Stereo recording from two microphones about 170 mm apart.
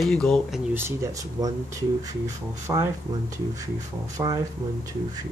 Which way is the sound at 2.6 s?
15° right (ahead or behind).